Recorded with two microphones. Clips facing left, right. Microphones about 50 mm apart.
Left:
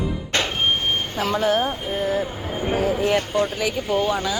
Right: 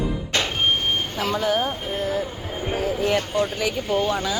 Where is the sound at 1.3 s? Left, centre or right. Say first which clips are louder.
Left 2 dB; centre.